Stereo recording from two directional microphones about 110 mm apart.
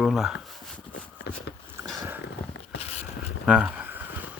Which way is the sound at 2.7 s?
70° left (ahead or behind).